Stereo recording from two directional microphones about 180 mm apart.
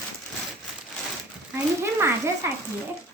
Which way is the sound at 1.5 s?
15° right (ahead or behind).